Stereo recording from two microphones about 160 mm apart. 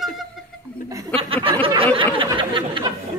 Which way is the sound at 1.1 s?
35° right (ahead or behind).